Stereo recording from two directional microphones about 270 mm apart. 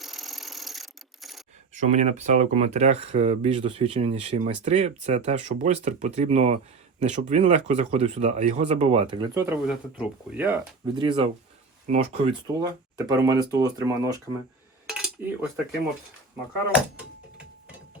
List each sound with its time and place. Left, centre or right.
0.0 s a sound: centre
1.7 s speech: right; by 10.6 s centre
10.9 s speech: centre
14.8 s cutlery: centre
17.3 s ratchet: centre